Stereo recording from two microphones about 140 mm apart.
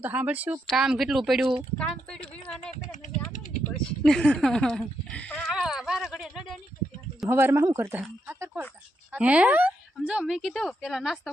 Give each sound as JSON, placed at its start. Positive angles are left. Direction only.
{"t": 0.0, "sound": "speech", "side_deg": -10}
{"t": 1.8, "sound": "speech", "side_deg": 5}
{"t": 2.9, "sound": "a sound", "side_deg": 65}
{"t": 4.0, "sound": "speech", "side_deg": 5}
{"t": 7.3, "sound": "speech", "side_deg": -20}